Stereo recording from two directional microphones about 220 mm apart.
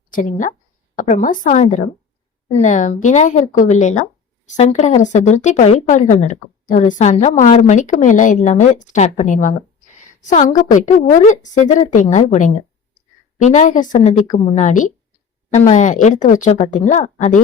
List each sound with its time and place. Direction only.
0.1 s a woman's voice: 35° left (ahead or behind)